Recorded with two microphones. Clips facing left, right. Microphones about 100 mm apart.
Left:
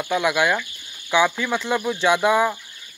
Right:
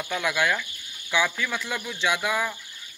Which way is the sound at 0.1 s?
20° left (ahead or behind).